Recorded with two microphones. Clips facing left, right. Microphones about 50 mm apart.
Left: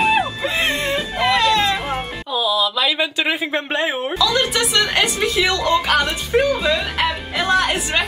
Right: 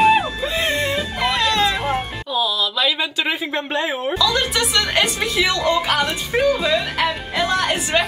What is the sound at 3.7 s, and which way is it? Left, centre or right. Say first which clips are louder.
Speech: even; left.